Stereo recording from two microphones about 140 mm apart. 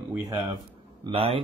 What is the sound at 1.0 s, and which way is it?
Speech, 40° right (ahead or behind).